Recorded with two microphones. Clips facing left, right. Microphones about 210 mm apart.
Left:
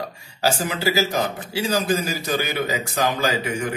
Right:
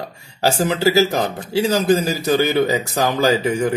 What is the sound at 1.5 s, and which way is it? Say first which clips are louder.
A man's voice: right 6 dB; 40° right (ahead or behind).